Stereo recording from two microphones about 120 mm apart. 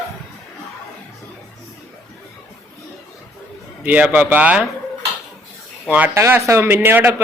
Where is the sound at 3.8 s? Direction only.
15° right (ahead or behind).